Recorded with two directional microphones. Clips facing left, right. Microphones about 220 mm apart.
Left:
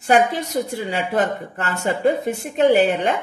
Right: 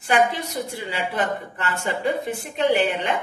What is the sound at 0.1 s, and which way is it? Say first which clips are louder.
A woman's voice: left 4 dB; 45° left (ahead or behind).